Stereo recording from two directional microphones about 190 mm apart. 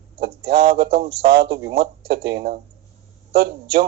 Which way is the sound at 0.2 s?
55° right (ahead or behind).